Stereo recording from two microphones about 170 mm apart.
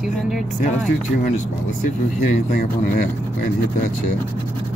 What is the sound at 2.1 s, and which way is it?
Speech, 55° left (ahead or behind).